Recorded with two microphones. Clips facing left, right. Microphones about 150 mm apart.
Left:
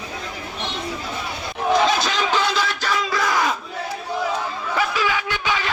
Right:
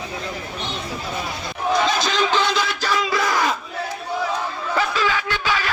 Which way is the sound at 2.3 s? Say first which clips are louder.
Right 1 dB; centre (ahead or behind).